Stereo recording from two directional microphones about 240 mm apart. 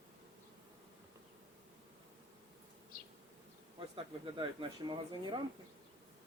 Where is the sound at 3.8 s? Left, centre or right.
Right.